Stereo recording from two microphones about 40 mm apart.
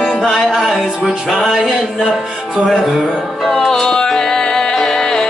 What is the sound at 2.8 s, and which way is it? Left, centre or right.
Music, centre.